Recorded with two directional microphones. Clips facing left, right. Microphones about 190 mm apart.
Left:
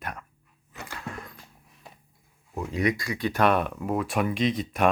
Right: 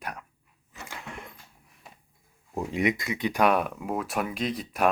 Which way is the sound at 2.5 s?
25° right (ahead or behind).